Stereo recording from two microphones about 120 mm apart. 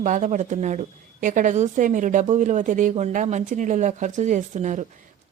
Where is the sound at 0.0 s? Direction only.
90° right.